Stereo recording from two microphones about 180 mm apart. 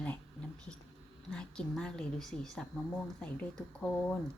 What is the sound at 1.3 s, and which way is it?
A woman's voice, 5° left (ahead or behind).